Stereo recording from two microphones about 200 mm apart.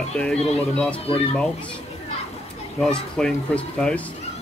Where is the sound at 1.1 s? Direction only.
25° left (ahead or behind).